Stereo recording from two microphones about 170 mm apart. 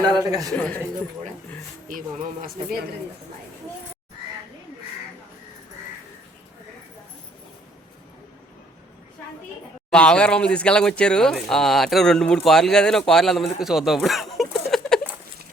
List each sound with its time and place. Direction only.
0.0 s a man's voice: 25° right (ahead or behind)
0.5 s speech: 5° left (ahead or behind)
9.9 s speech: 5° left (ahead or behind)